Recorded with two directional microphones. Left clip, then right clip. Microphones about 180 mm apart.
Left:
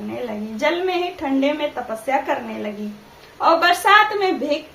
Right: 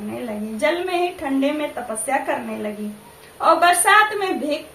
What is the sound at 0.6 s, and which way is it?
A woman's voice, 15° left (ahead or behind).